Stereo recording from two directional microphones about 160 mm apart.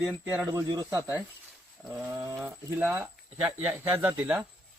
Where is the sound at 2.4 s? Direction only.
10° right (ahead or behind).